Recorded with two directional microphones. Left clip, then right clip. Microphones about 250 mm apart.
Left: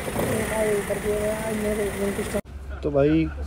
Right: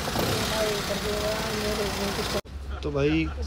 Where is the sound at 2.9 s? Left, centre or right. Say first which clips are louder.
Left 5 dB; centre.